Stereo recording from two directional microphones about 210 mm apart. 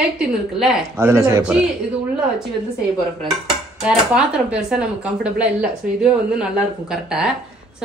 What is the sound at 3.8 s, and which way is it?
Speech, 5° right (ahead or behind).